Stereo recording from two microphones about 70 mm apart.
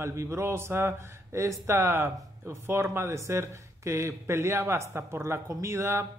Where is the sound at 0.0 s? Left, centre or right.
Right.